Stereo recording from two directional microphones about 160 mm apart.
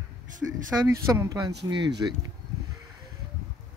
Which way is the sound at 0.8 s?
20° right (ahead or behind).